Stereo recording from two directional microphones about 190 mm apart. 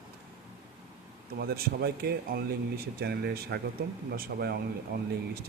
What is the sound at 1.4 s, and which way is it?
Speech, 55° right (ahead or behind).